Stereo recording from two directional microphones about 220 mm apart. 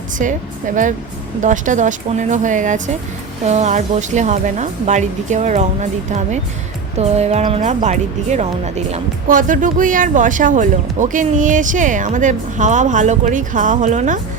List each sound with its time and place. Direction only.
0.2 s speech: 35° right (ahead or behind)
1.4 s speech: 35° right (ahead or behind)